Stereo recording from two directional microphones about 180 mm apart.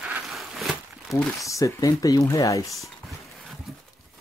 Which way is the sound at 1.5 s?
15° left (ahead or behind).